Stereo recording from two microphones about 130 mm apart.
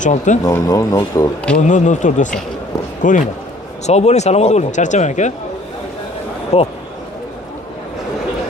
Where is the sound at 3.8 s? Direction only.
60° left (ahead or behind).